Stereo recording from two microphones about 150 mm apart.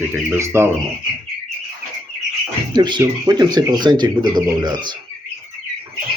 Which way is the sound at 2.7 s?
30° right (ahead or behind).